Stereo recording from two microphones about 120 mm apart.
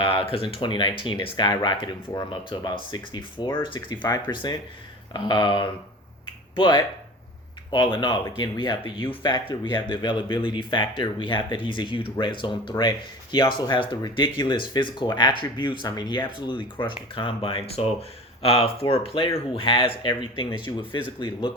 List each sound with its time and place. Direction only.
0.0 s speech: 50° left (ahead or behind)